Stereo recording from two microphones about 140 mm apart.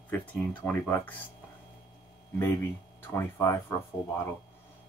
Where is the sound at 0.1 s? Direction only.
10° left (ahead or behind).